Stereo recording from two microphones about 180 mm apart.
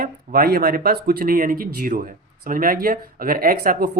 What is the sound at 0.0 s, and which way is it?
Speech, 50° right (ahead or behind).